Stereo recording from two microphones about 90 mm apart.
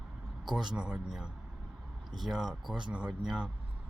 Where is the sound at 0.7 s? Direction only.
10° right (ahead or behind).